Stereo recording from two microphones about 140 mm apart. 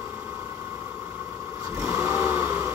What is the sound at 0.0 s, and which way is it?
Vehicle, 15° right (ahead or behind).